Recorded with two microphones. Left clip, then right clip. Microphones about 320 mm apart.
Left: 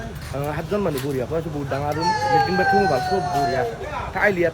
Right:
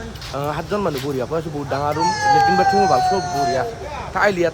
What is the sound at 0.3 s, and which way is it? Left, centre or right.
Speech, centre.